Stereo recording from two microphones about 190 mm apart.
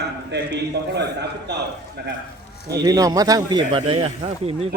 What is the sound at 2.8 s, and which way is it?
Speech, 20° right (ahead or behind).